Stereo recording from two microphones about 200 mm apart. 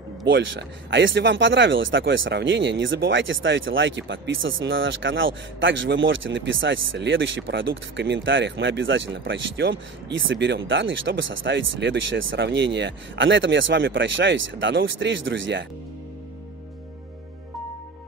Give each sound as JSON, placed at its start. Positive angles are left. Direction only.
{"t": 0.3, "sound": "speech", "side_deg": -65}